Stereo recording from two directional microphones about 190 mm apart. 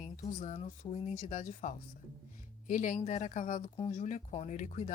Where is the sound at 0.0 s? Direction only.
40° left (ahead or behind).